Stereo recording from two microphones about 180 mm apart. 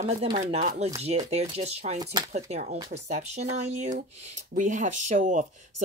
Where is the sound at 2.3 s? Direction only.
40° right (ahead or behind).